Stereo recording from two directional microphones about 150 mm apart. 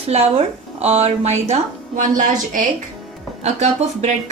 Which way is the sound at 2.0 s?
60° right (ahead or behind).